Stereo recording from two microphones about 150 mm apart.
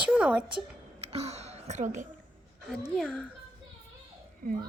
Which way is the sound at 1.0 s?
45° right (ahead or behind).